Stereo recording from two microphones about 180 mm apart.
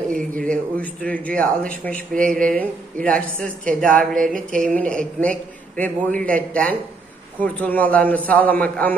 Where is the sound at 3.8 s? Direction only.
50° right (ahead or behind).